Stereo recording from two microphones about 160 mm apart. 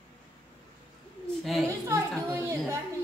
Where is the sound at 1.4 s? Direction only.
Centre (ahead or behind).